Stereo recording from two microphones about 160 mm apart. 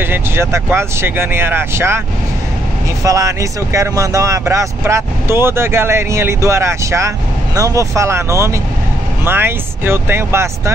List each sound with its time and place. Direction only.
0.0 s speech: 15° right (ahead or behind)
3.0 s speech: 20° right (ahead or behind)